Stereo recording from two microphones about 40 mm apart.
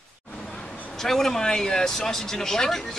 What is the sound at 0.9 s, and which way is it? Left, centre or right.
Speech, centre.